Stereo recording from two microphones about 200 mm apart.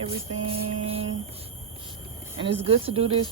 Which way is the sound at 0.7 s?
35° right (ahead or behind).